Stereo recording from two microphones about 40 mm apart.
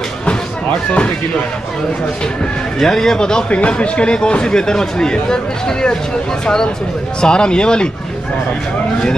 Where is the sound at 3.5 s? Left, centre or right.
Left.